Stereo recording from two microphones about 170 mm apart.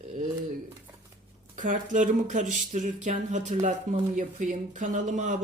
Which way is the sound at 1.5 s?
50° right (ahead or behind).